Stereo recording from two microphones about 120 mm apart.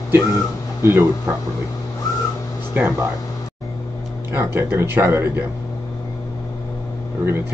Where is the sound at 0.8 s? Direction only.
20° right (ahead or behind).